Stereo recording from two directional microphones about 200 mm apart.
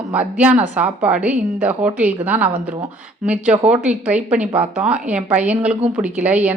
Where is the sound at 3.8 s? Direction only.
5° right (ahead or behind).